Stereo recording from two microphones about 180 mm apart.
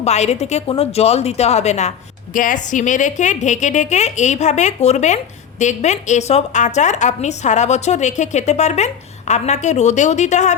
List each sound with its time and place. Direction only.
0.0 s a woman's voice: 40° left (ahead or behind)